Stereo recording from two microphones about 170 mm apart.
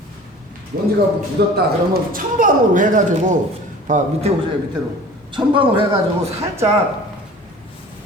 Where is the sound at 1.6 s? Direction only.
60° right (ahead or behind).